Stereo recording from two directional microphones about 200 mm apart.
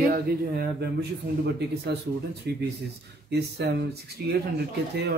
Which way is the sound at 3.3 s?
55° right (ahead or behind).